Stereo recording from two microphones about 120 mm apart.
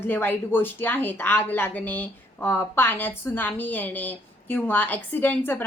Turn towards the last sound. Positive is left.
turn(degrees=15)  # may be behind; listen again after turning